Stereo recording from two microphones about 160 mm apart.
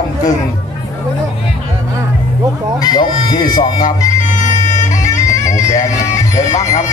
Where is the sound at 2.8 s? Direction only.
25° left (ahead or behind).